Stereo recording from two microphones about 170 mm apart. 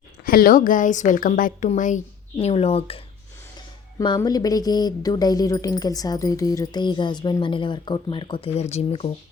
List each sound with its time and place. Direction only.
0.3 s a woman's voice: 60° left (ahead or behind); by 9.1 s 35° left (ahead or behind)